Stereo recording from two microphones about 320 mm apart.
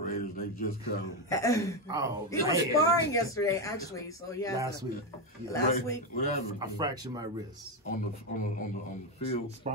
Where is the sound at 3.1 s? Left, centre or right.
Centre.